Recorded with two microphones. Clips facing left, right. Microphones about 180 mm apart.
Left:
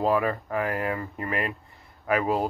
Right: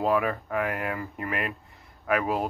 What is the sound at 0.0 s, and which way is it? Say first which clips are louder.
Speech: left 1 dB; centre (ahead or behind).